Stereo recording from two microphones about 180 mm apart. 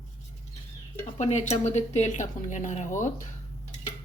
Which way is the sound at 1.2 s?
40° left (ahead or behind).